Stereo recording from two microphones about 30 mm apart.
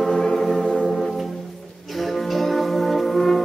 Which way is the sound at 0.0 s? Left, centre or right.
Centre.